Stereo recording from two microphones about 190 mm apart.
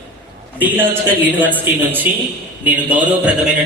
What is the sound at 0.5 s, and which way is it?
A man's voice, 10° right (ahead or behind).